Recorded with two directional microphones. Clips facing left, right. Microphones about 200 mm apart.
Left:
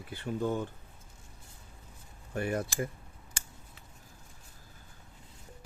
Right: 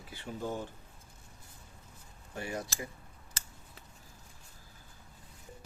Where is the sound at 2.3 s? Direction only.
55° left (ahead or behind).